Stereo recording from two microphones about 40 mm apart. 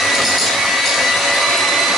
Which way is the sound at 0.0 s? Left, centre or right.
Centre.